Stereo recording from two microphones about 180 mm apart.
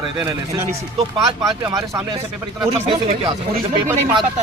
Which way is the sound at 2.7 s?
30° right (ahead or behind).